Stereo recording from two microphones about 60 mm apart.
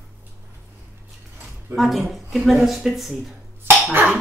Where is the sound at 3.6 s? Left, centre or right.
Right.